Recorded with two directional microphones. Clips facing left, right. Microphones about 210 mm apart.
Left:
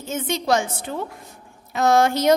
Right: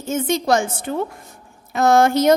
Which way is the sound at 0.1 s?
45° right (ahead or behind).